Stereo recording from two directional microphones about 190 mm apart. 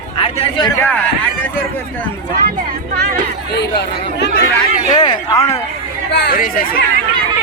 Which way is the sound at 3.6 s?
65° left (ahead or behind).